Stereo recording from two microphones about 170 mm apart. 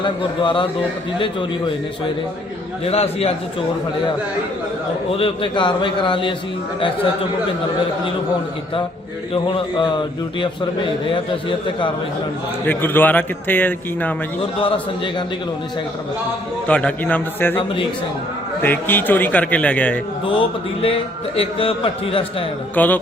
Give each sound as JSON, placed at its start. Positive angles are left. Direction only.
{"t": 0.0, "sound": "a man's voice", "side_deg": 30}
{"t": 2.8, "sound": "a man's voice", "side_deg": 35}
{"t": 5.1, "sound": "a man's voice", "side_deg": 30}
{"t": 9.3, "sound": "a man's voice", "side_deg": 30}
{"t": 12.6, "sound": "a man's voice", "side_deg": 10}
{"t": 14.6, "sound": "a man's voice", "side_deg": 30}
{"t": 16.6, "sound": "a man's voice", "side_deg": 10}
{"t": 18.6, "sound": "a man's voice", "side_deg": 10}
{"t": 20.8, "sound": "a man's voice", "side_deg": 35}
{"t": 22.7, "sound": "a man's voice", "side_deg": 10}